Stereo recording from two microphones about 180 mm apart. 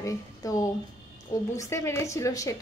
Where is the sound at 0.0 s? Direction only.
20° left (ahead or behind).